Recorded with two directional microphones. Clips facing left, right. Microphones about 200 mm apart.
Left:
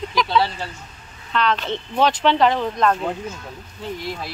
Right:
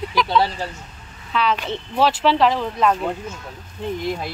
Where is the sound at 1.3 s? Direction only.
5° right (ahead or behind).